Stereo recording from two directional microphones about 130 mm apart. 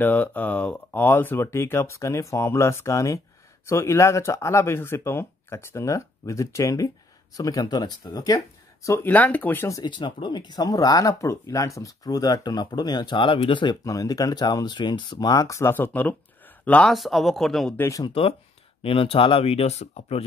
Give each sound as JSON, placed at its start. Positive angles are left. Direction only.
{"t": 0.0, "sound": "speech", "side_deg": 15}
{"t": 8.8, "sound": "speech", "side_deg": 20}
{"t": 9.8, "sound": "speech", "side_deg": 35}
{"t": 13.8, "sound": "speech", "side_deg": 25}
{"t": 16.9, "sound": "speech", "side_deg": 0}
{"t": 17.7, "sound": "speech", "side_deg": 20}
{"t": 18.0, "sound": "speech", "side_deg": 45}